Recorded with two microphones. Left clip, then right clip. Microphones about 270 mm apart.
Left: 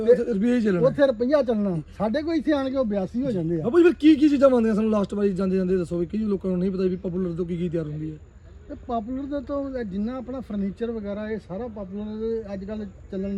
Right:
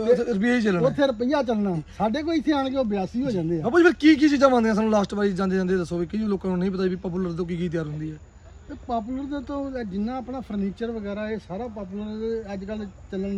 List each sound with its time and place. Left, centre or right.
0.2 s a man's voice: centre
0.9 s a man's voice: centre
8.9 s speech: centre